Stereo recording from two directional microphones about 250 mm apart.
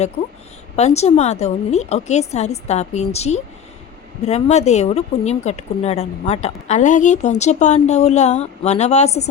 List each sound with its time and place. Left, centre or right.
0.8 s speech: left